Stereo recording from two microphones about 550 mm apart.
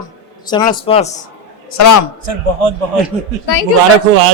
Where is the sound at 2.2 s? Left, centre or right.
Right.